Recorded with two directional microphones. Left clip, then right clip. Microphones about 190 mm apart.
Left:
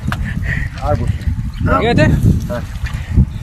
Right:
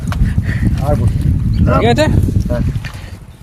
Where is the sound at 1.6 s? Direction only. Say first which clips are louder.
Right 1 dB; 20° right (ahead or behind).